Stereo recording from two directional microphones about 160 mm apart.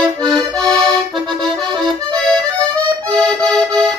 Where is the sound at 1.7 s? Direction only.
30° right (ahead or behind).